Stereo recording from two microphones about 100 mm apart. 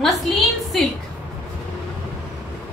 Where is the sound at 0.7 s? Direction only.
Centre (ahead or behind).